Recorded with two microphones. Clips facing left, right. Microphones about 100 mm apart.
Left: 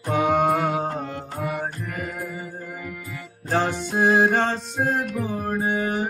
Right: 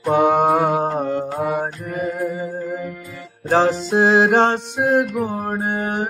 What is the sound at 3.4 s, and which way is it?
Music, 90° right.